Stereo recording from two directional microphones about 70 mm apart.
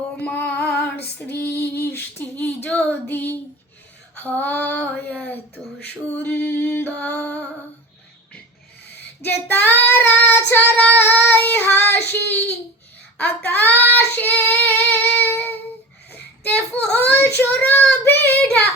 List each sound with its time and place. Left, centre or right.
0.3 s female singing: left
2.3 s female singing: centre
7.0 s music: centre
9.2 s female singing: left
11.0 s child singing: left
13.1 s speech: left
14.2 s child singing: left
16.1 s a sound: left
17.4 s female singing: left
18.0 s child singing: left
18.3 s child singing: centre